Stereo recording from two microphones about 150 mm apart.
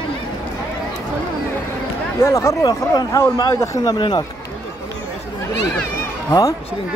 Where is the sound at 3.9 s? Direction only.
30° left (ahead or behind).